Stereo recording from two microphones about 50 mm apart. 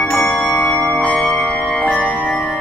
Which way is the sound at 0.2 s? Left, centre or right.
Centre.